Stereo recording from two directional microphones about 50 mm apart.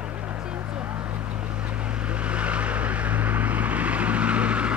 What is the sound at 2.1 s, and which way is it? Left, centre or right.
Vehicle, right.